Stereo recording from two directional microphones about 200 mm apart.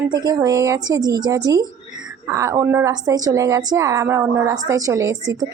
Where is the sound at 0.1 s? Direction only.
20° right (ahead or behind).